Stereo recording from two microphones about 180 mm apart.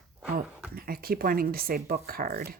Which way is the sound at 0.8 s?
55° right (ahead or behind).